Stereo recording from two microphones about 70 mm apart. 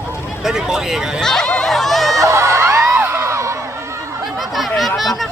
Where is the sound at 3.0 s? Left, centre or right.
Right.